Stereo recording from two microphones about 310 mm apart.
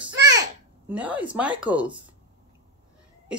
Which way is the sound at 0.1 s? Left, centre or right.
Right.